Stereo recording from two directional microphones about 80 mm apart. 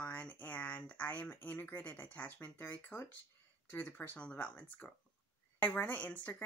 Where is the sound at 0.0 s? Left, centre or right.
Centre.